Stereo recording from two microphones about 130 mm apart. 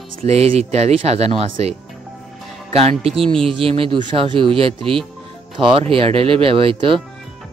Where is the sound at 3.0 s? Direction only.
45° right (ahead or behind).